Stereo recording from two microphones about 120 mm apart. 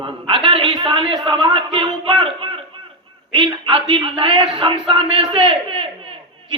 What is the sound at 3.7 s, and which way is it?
A man's voice, 40° right (ahead or behind).